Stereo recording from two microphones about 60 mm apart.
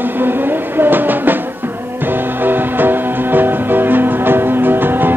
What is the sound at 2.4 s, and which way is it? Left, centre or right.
Music, right.